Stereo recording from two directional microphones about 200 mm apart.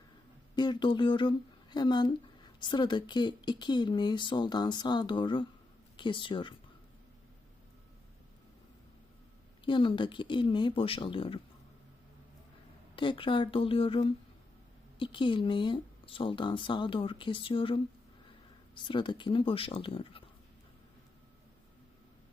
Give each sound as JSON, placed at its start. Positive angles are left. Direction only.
{"t": 0.5, "sound": "speech", "side_deg": 20}
{"t": 9.6, "sound": "speech", "side_deg": 25}
{"t": 13.0, "sound": "speech", "side_deg": 25}